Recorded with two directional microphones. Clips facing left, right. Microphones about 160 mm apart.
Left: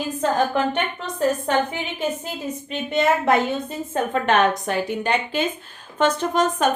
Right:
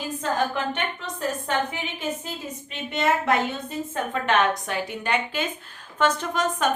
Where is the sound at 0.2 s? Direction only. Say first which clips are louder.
Left 5 dB; 45° left (ahead or behind).